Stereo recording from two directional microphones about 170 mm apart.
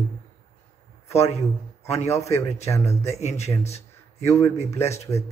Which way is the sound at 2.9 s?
40° left (ahead or behind).